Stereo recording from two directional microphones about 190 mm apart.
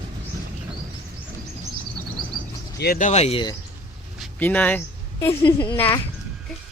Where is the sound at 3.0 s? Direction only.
35° left (ahead or behind).